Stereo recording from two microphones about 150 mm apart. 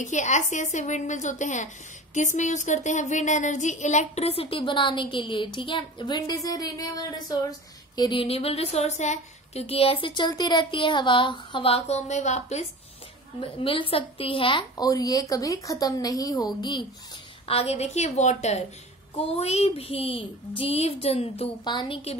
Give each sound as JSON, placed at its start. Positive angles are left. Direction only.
{"t": 0.0, "sound": "a woman's voice", "side_deg": 55}
{"t": 13.4, "sound": "speech", "side_deg": 35}
{"t": 14.9, "sound": "a woman's voice", "side_deg": 25}
{"t": 17.5, "sound": "a woman's voice", "side_deg": 40}